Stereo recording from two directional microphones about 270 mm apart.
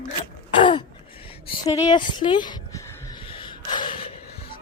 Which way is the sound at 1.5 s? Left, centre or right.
Centre.